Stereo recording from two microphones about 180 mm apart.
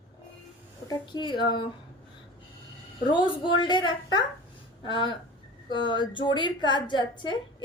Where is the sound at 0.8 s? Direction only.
25° left (ahead or behind).